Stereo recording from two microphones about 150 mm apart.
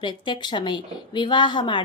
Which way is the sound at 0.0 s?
30° left (ahead or behind).